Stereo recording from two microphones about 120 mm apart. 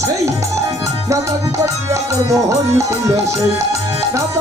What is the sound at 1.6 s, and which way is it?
Speech, 25° right (ahead or behind).